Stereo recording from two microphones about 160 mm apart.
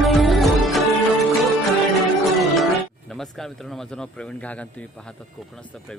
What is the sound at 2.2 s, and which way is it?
Music, centre (ahead or behind).